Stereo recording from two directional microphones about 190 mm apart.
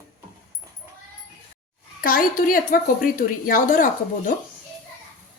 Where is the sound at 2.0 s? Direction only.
50° left (ahead or behind).